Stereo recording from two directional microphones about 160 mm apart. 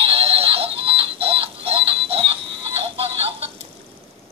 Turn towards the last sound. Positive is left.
turn(degrees=-35)  # may be behind; listen again after turning